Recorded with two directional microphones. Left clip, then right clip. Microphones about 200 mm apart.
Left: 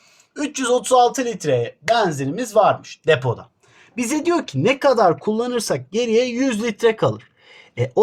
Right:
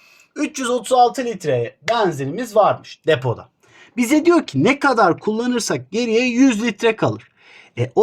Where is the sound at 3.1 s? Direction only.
25° right (ahead or behind).